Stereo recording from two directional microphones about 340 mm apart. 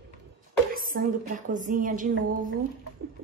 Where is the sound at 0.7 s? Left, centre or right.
Right.